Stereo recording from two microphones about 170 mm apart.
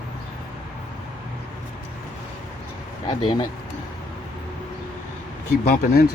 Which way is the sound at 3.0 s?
30° left (ahead or behind).